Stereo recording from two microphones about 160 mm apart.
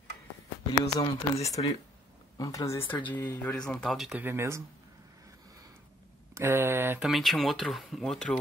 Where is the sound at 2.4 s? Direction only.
20° left (ahead or behind); by 4.6 s 15° right (ahead or behind).